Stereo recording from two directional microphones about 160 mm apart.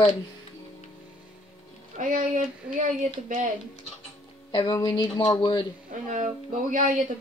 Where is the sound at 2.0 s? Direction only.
50° right (ahead or behind).